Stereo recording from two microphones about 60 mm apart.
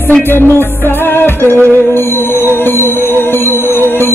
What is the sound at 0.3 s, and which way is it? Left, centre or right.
Music, left.